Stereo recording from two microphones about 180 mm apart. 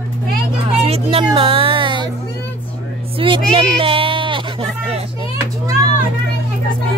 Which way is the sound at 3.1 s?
30° right (ahead or behind).